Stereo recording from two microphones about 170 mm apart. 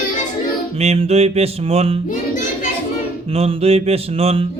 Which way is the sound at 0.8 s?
40° right (ahead or behind).